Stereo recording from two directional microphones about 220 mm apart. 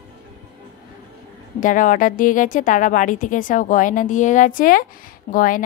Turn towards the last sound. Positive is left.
turn(degrees=40)  # may be behind; listen again after turning